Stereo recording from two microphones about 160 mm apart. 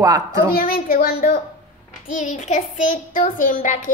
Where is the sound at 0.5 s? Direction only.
65° left (ahead or behind).